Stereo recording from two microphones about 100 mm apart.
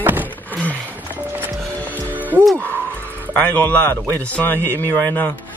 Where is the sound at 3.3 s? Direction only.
15° left (ahead or behind).